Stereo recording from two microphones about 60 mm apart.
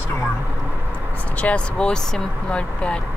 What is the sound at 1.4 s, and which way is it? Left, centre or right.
Speech, centre.